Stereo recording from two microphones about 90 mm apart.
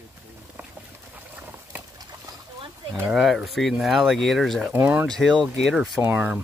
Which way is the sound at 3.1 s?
Centre (ahead or behind).